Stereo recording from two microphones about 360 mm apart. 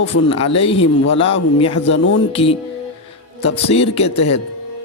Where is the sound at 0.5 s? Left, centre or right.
Centre.